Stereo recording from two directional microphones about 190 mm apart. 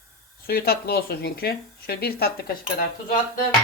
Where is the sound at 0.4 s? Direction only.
55° left (ahead or behind).